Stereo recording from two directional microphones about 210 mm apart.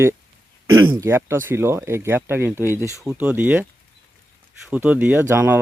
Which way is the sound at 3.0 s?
10° right (ahead or behind).